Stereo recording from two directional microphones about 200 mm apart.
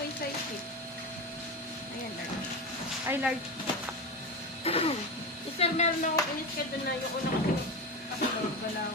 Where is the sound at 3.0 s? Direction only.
10° right (ahead or behind).